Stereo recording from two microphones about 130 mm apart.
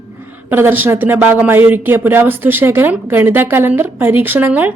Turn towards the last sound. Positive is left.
turn(degrees=-15)  # may be behind; listen again after turning